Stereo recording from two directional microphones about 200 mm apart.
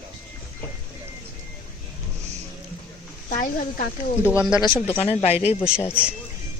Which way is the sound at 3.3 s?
40° left (ahead or behind).